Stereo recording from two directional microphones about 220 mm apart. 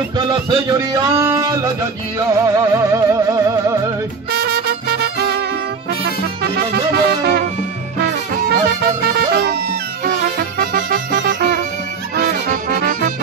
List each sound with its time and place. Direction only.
0.3 s music: 20° right (ahead or behind)
4.3 s music: 45° right (ahead or behind)
6.5 s music: 45° right (ahead or behind)
8.6 s music: 45° right (ahead or behind)
10.0 s music: 40° right (ahead or behind)